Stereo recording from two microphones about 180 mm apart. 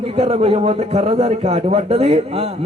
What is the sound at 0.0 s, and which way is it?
A man's voice, 35° right (ahead or behind).